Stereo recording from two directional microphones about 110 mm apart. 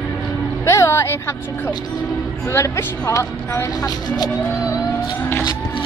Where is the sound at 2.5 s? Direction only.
30° left (ahead or behind).